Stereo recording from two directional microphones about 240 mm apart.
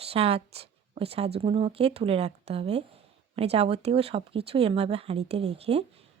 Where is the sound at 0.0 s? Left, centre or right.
Right.